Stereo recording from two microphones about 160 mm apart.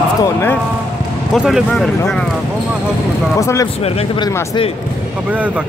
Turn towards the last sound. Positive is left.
turn(degrees=20)  # may be behind; listen again after turning